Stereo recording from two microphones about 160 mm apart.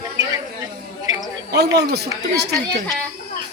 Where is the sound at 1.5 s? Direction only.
90° right.